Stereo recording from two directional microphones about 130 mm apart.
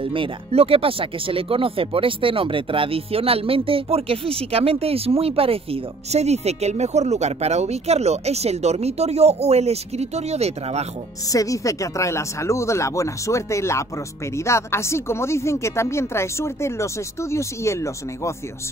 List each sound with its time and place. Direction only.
0.0 s speech: 45° right (ahead or behind)
11.2 s speech: 25° left (ahead or behind)